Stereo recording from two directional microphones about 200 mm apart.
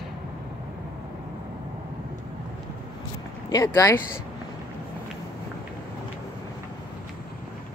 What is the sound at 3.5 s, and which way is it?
Speech, 15° left (ahead or behind).